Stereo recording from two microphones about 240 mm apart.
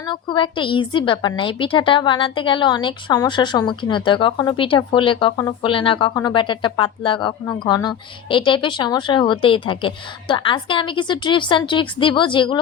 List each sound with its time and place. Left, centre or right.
0.0 s a woman's voice: centre